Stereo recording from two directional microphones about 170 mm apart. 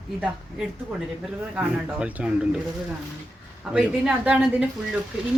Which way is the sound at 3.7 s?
5° right (ahead or behind).